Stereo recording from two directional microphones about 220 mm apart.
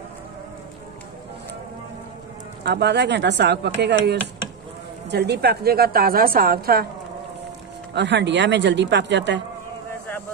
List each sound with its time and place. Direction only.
2.6 s a woman's voice: 50° right (ahead or behind)
7.9 s a woman's voice: 50° right (ahead or behind)